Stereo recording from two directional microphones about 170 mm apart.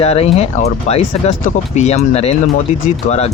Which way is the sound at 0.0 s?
35° left (ahead or behind).